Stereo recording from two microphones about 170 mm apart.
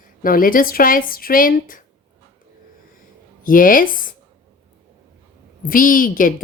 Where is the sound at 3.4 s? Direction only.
55° left (ahead or behind).